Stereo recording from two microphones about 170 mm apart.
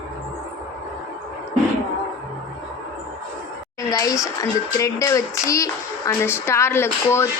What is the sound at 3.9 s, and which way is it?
A woman's voice, 20° left (ahead or behind).